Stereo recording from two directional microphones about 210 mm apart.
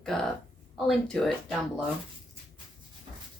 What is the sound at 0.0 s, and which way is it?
A woman's voice, centre (ahead or behind).